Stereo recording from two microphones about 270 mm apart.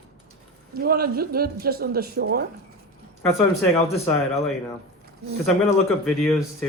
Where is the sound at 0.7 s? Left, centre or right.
Right.